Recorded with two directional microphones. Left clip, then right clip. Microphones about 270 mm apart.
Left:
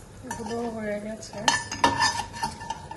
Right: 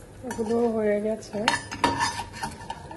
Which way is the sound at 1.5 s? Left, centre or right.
Centre.